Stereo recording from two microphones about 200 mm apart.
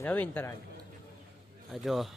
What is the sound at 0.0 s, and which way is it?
Speech, 10° left (ahead or behind).